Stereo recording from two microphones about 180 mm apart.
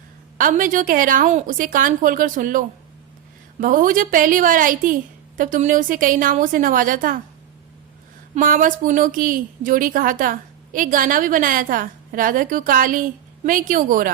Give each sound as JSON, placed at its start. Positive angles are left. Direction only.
{"t": 0.3, "sound": "a woman's voice", "side_deg": -50}
{"t": 8.4, "sound": "a woman's voice", "side_deg": -50}